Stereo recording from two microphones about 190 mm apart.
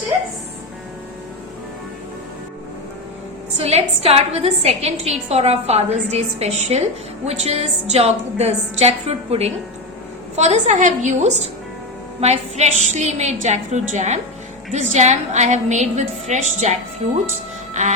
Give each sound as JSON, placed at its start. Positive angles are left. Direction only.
{"t": 3.6, "sound": "a woman's voice", "side_deg": -30}